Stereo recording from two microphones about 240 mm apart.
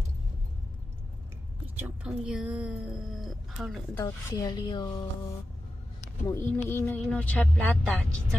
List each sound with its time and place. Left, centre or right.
1.8 s speech: centre
3.9 s speech: centre
6.2 s speech: centre